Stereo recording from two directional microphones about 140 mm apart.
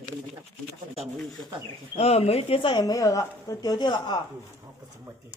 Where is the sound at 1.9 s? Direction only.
45° left (ahead or behind); by 4.2 s 30° left (ahead or behind).